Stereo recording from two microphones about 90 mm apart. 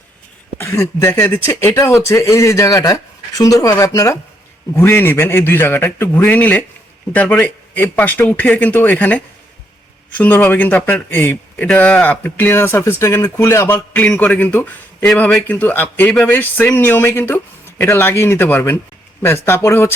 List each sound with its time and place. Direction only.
0.6 s speech: 30° left (ahead or behind)
4.7 s a man's voice: 25° left (ahead or behind)
13.7 s a man's voice: 15° left (ahead or behind)